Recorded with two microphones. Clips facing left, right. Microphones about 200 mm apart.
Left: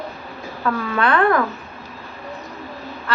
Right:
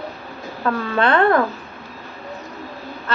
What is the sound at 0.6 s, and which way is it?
Speech, 30° right (ahead or behind).